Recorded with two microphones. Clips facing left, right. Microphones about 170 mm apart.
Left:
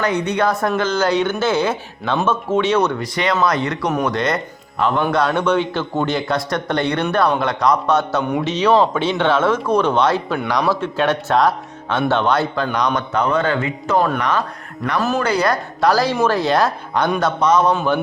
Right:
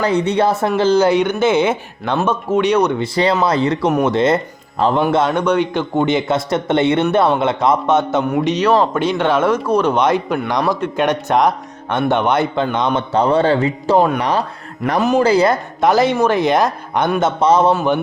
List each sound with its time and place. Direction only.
0.0 s speech: 30° right (ahead or behind)
1.0 s speech: 15° right (ahead or behind)
3.0 s speech: 30° right (ahead or behind)
8.3 s speech: 10° right (ahead or behind)
13.0 s speech: 30° right (ahead or behind)
14.9 s speech: 15° right (ahead or behind)